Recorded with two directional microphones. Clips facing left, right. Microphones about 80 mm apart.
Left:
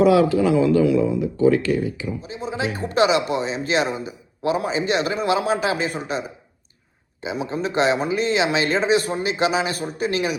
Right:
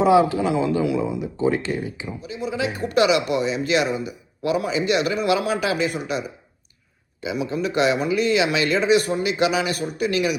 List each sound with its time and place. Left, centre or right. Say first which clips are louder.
0.0 s speech: left 1 dB; right
2.2 s a man's voice: right 3 dB; left